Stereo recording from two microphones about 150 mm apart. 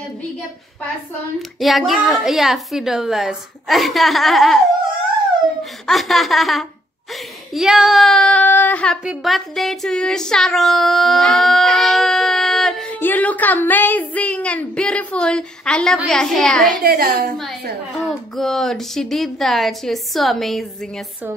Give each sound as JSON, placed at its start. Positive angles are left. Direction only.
{"t": 1.6, "sound": "a woman's voice", "side_deg": 0}
{"t": 5.6, "sound": "speech", "side_deg": 0}
{"t": 7.5, "sound": "child singing", "side_deg": -5}
{"t": 13.0, "sound": "a woman's voice", "side_deg": 10}
{"t": 16.8, "sound": "a woman's voice", "side_deg": -90}
{"t": 17.9, "sound": "a woman's voice", "side_deg": 0}